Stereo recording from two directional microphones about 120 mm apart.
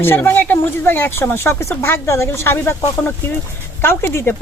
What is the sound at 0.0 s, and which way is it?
Speech, 20° left (ahead or behind).